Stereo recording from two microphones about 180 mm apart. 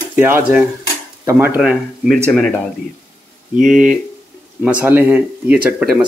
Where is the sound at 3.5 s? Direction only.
5° right (ahead or behind).